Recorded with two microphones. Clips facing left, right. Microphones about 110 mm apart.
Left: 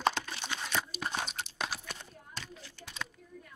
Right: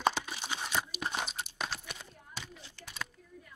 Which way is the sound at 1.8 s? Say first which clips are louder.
Left 1 dB; 10° right (ahead or behind).